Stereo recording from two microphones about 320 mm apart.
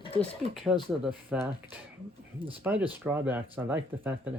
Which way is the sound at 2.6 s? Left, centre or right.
Centre.